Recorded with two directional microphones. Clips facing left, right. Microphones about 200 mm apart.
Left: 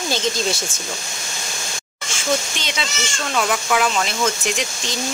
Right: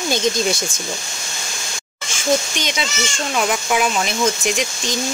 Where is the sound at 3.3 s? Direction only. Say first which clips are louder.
Even; 15° right (ahead or behind).